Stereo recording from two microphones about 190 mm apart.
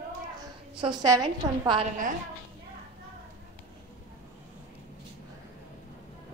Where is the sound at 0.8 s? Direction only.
20° right (ahead or behind).